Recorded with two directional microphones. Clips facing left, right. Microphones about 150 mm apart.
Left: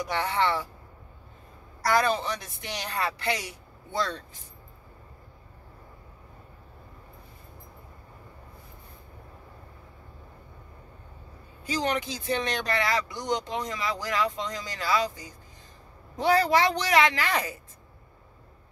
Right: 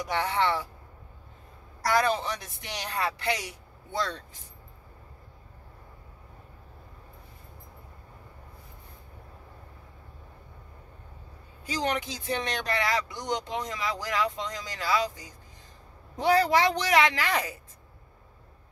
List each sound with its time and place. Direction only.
0.1 s speech: 15° right (ahead or behind)
2.0 s speech: 15° right (ahead or behind)
11.6 s speech: 15° right (ahead or behind)
16.2 s speech: 15° right (ahead or behind)